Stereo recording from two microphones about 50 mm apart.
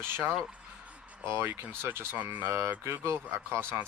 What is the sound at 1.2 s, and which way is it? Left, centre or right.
Speech, right.